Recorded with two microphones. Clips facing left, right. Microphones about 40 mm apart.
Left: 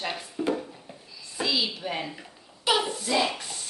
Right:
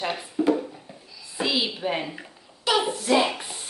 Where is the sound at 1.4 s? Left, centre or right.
Right.